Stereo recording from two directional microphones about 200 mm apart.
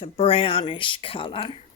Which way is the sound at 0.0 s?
30° left (ahead or behind).